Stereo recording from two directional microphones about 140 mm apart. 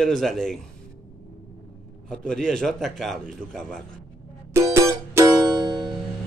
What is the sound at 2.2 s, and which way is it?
A man's voice, 5° left (ahead or behind).